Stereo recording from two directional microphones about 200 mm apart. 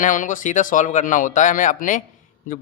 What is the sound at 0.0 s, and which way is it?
Speech, 40° left (ahead or behind).